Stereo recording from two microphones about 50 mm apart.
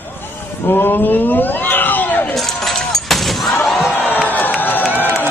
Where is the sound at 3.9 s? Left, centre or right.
Left.